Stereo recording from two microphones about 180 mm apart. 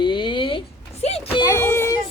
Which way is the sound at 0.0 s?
25° left (ahead or behind).